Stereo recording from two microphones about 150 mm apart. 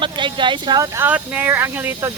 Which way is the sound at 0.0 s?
30° right (ahead or behind).